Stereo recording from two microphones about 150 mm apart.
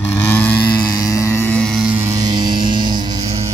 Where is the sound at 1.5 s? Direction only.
5° left (ahead or behind).